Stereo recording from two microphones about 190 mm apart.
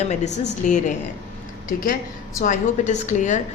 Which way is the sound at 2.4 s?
40° left (ahead or behind).